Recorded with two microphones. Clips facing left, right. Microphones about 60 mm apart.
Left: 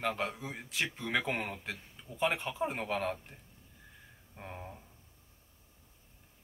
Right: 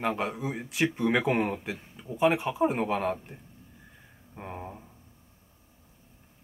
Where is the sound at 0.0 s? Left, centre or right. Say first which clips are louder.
Right 5 dB; centre.